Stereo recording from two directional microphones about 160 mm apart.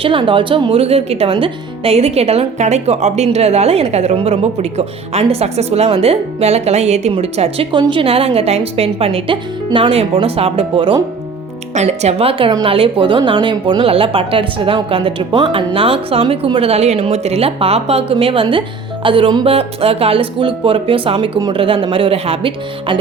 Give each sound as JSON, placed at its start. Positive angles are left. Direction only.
{"t": 0.0, "sound": "speech", "side_deg": -35}
{"t": 11.7, "sound": "speech", "side_deg": -45}